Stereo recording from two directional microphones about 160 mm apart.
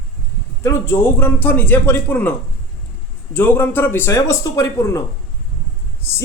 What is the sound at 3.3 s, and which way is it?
A man's voice, 10° left (ahead or behind).